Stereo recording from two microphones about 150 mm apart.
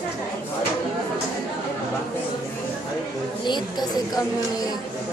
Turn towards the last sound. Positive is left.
turn(degrees=25)  # may be behind; listen again after turning